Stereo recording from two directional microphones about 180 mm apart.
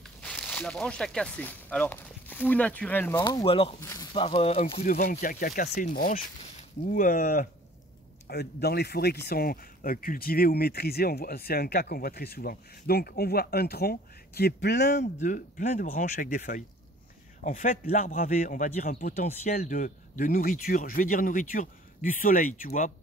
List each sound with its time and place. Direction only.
0.0 s speech: 5° left (ahead or behind)
3.2 s speech: 25° left (ahead or behind)
3.8 s speech: 20° left (ahead or behind)
4.1 s speech: 30° left (ahead or behind)
5.1 s a man's voice: 50° left (ahead or behind)
8.3 s speech: 65° left (ahead or behind)
14.9 s a man's voice: 40° left (ahead or behind)